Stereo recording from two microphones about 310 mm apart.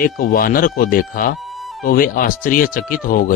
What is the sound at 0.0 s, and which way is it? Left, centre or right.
Speech, left.